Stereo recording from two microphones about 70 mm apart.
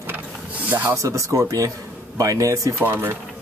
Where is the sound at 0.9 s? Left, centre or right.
Right.